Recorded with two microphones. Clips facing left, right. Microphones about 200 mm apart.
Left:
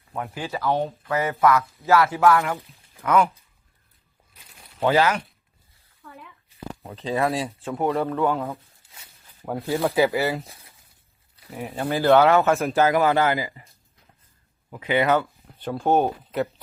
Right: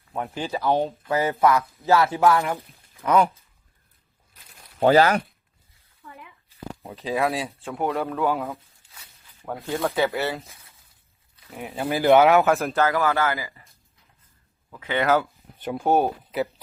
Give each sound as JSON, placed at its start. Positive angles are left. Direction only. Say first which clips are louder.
{"t": 0.1, "sound": "speech", "louder": "right 2 dB", "side_deg": -15}
{"t": 0.7, "sound": "speech", "louder": "right 1 dB", "side_deg": -30}
{"t": 3.0, "sound": "speech", "louder": "even", "side_deg": -25}
{"t": 4.8, "sound": "speech", "louder": "right 3 dB", "side_deg": -40}
{"t": 7.0, "sound": "speech", "louder": "left 1 dB", "side_deg": 0}
{"t": 11.5, "sound": "speech", "louder": "left 1 dB", "side_deg": 0}
{"t": 11.9, "sound": "speech", "louder": "right 1 dB", "side_deg": -15}
{"t": 12.5, "sound": "speech", "louder": "even", "side_deg": 0}
{"t": 12.7, "sound": "speech", "louder": "left 3 dB", "side_deg": 15}
{"t": 15.0, "sound": "speech", "louder": "right 2 dB", "side_deg": -5}
{"t": 15.5, "sound": "speech", "louder": "even", "side_deg": -15}
{"t": 15.8, "sound": "speech", "louder": "even", "side_deg": 0}